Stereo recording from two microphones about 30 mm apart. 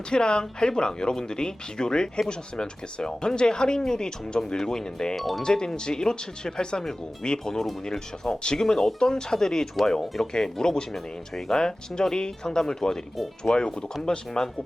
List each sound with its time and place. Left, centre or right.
0.1 s speech: left
5.1 s speech: centre
5.4 s speech: left
8.6 s speech: centre
11.5 s speech: left